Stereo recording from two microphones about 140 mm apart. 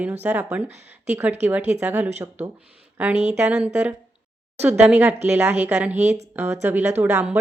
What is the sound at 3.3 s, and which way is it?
Speech, 15° right (ahead or behind).